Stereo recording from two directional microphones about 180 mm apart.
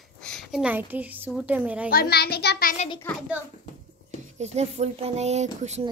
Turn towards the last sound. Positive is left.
turn(degrees=-40)  # may be behind; listen again after turning